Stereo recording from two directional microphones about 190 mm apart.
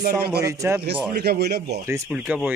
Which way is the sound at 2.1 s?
5° right (ahead or behind).